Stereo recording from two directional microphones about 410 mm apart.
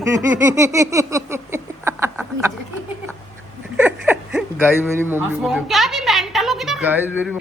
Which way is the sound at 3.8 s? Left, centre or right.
Centre.